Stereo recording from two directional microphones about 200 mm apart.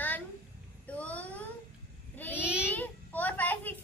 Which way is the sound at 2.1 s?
10° left (ahead or behind).